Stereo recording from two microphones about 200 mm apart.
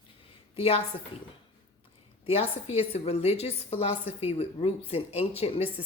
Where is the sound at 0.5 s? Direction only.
30° left (ahead or behind).